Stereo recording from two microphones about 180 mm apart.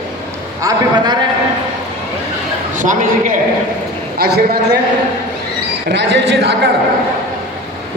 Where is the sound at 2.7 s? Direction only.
45° right (ahead or behind).